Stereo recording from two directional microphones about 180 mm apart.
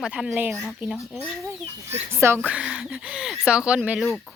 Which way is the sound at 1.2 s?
15° right (ahead or behind).